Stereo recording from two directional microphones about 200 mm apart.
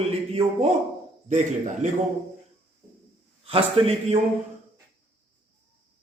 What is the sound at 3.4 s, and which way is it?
Speech, 30° right (ahead or behind).